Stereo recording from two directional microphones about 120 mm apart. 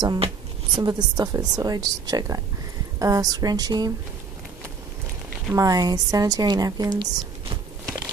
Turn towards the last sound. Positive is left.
turn(degrees=-35)  # may be behind; listen again after turning